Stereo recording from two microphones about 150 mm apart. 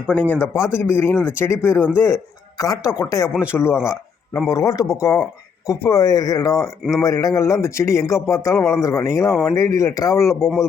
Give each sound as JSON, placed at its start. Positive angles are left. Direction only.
{"t": 0.1, "sound": "speech", "side_deg": 10}
{"t": 3.2, "sound": "speech", "side_deg": -5}
{"t": 3.5, "sound": "speech", "side_deg": 15}
{"t": 10.2, "sound": "speech", "side_deg": 0}